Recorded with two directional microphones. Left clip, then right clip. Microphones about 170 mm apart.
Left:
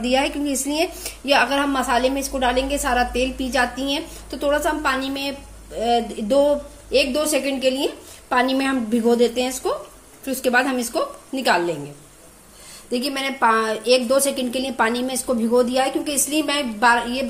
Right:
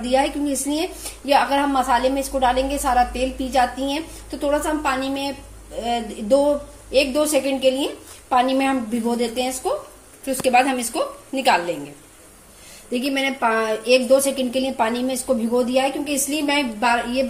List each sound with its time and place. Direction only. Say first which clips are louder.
0.1 s a woman's voice: right 2 dB; 35° left (ahead or behind)
12.9 s a woman's voice: right 2 dB; 40° left (ahead or behind)